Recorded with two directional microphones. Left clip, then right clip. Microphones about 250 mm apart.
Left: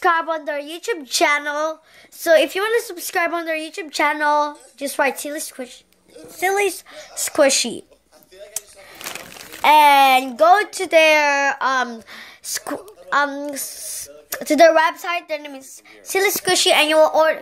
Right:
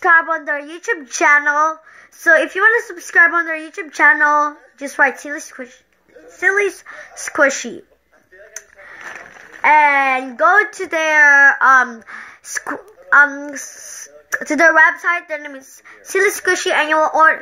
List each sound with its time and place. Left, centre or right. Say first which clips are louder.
0.0 s a woman's voice: right 5 dB; centre
6.4 s a woman's voice: right 3 dB; centre
9.0 s a sound: left 1 dB; left
9.9 s a woman's voice: left 2 dB; centre
13.6 s speech: right 1 dB; centre
14.3 s a woman's voice: even; centre